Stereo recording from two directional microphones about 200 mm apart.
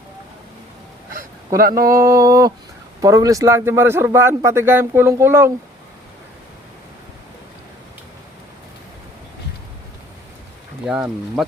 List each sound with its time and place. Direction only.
1.5 s speech: 45° right (ahead or behind)
2.0 s a man's voice: 15° right (ahead or behind)
10.8 s speech: 5° right (ahead or behind)